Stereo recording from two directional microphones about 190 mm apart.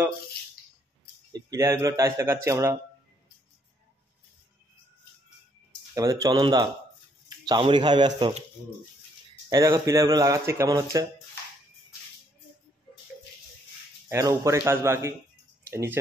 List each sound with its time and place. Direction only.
1.3 s speech: 15° right (ahead or behind)
5.9 s speech: 15° right (ahead or behind)
9.5 s speech: 15° right (ahead or behind)
14.0 s speech: 15° right (ahead or behind)